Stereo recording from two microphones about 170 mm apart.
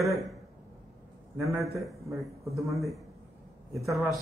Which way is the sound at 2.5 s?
20° right (ahead or behind).